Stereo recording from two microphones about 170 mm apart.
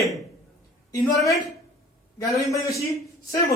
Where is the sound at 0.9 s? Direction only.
20° left (ahead or behind).